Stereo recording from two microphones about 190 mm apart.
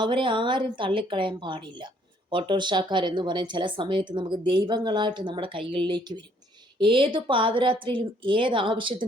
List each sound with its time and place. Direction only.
0.0 s speech: 25° right (ahead or behind)